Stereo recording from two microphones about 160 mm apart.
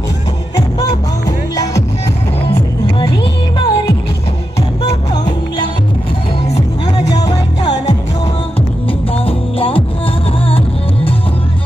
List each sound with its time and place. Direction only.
0.6 s music: 20° left (ahead or behind)
3.0 s music: 25° left (ahead or behind)
5.1 s music: 25° left (ahead or behind)
7.2 s music: 25° left (ahead or behind)
9.1 s music: 35° left (ahead or behind)